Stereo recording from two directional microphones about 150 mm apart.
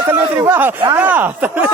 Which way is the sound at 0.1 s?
15° right (ahead or behind).